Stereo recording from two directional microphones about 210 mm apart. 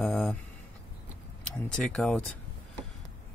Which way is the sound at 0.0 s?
Centre (ahead or behind).